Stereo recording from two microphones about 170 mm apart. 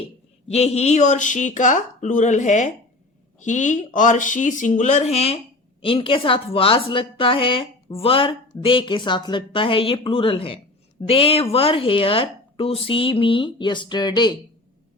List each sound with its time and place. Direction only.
0.5 s a woman's voice: 40° left (ahead or behind)